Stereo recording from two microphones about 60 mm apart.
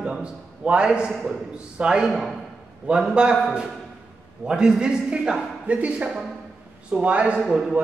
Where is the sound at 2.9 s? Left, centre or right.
Right.